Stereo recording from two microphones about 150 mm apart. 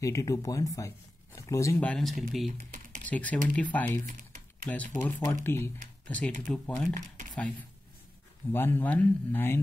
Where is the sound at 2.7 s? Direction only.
60° right (ahead or behind).